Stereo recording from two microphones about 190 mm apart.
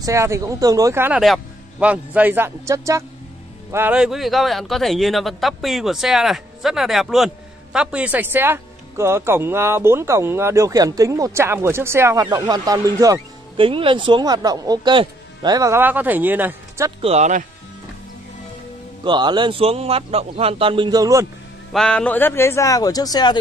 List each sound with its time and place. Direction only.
0.0 s speech: 15° right (ahead or behind)
17.0 s speech: 35° right (ahead or behind)
19.0 s speech: 25° right (ahead or behind)
21.7 s a man's voice: 5° left (ahead or behind); by 23.3 s 20° left (ahead or behind)